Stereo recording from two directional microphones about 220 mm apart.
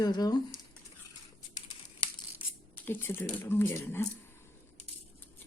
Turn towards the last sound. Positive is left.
turn(degrees=10)  # may be behind; listen again after turning